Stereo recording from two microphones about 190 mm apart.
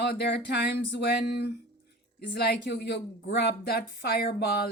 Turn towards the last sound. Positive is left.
turn(degrees=55)  # may be behind; listen again after turning